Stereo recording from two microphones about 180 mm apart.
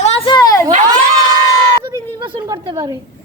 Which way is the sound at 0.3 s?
20° left (ahead or behind).